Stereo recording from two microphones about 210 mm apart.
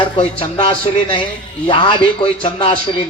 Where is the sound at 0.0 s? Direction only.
25° left (ahead or behind).